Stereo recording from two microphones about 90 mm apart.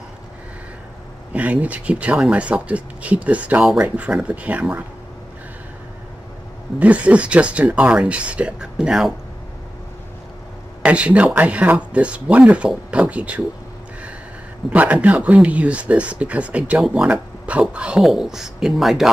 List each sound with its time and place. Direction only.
1.3 s speech: 15° right (ahead or behind)
6.8 s speech: 15° right (ahead or behind)
10.8 s speech: 15° right (ahead or behind)
14.7 s speech: 15° right (ahead or behind)